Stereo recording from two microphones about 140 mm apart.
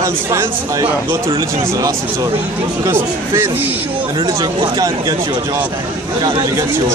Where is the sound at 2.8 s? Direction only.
20° right (ahead or behind).